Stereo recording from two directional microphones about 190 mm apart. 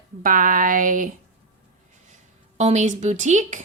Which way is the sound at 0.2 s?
45° right (ahead or behind).